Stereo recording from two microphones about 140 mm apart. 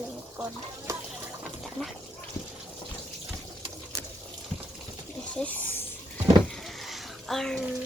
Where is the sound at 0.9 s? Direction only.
20° right (ahead or behind).